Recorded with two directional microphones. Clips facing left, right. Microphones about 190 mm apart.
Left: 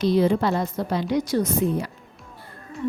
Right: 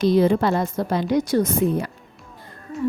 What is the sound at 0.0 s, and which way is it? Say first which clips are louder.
A woman's voice: right 2 dB; 50° right (ahead or behind).